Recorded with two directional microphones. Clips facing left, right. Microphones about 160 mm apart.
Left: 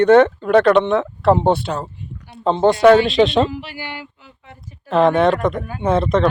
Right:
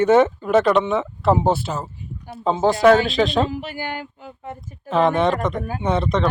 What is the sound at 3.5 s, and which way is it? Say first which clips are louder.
Speech: right 2 dB; 45° right (ahead or behind).